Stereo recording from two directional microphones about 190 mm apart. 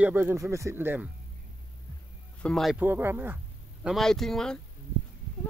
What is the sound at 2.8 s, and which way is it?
Speech, 10° right (ahead or behind).